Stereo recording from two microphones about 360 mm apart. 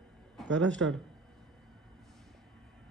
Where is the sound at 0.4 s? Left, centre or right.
Centre.